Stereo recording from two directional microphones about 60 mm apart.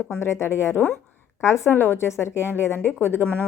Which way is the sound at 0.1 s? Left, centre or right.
Left.